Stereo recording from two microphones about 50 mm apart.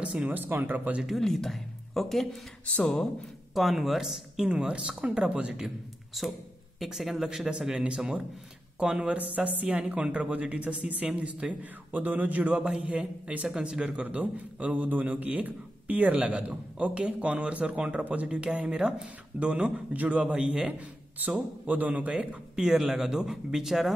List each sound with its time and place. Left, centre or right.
0.0 s speech: right
0.3 s speech: right
1.2 s speech: centre
2.6 s speech: left
3.5 s speech: centre
4.5 s a man's voice: centre
6.2 s a man's voice: centre
9.2 s a man's voice: right
12.5 s a man's voice: right
13.5 s a man's voice: centre
14.0 s a man's voice: right; by 23.9 s centre